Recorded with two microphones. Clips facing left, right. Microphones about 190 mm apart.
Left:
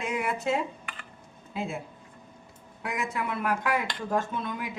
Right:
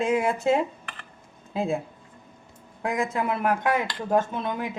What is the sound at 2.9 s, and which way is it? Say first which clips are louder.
Speech: right 5 dB; 30° right (ahead or behind).